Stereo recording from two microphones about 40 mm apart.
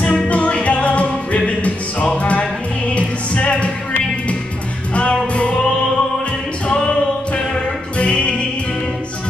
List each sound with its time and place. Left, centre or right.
0.0 s music: left
4.9 s music: left
7.3 s music: left